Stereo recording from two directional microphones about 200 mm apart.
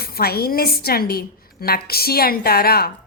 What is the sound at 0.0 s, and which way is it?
A woman's voice, 50° left (ahead or behind).